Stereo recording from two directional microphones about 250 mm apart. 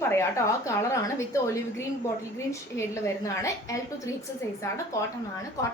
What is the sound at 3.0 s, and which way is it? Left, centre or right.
A woman's voice, centre.